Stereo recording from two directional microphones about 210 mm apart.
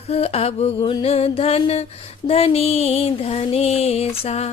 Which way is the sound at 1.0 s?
30° left (ahead or behind).